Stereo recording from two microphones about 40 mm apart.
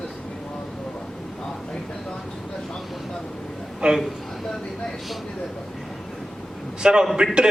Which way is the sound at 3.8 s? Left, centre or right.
Right.